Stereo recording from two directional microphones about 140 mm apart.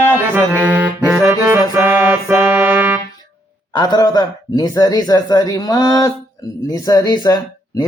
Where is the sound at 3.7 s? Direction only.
30° left (ahead or behind).